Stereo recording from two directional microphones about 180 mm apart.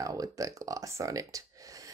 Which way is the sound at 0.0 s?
20° right (ahead or behind).